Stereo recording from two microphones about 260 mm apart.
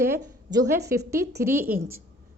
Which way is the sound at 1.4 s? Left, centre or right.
Centre.